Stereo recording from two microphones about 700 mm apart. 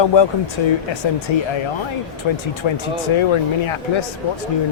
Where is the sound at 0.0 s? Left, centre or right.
Left.